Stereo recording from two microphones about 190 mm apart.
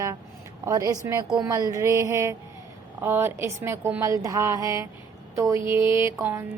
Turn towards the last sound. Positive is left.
turn(degrees=-15)  # may be behind; listen again after turning